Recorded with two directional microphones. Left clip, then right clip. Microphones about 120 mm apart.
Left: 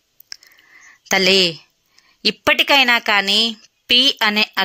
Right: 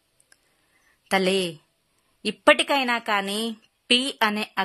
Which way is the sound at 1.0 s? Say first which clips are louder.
Left 8 dB; 10° left (ahead or behind).